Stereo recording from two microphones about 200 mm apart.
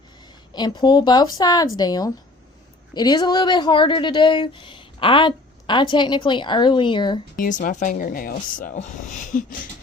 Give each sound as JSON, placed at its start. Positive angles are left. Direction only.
{"t": 0.5, "sound": "speech", "side_deg": 20}
{"t": 7.3, "sound": "speech", "side_deg": 40}